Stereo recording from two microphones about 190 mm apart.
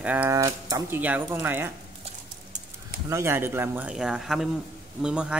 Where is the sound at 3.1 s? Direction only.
15° right (ahead or behind).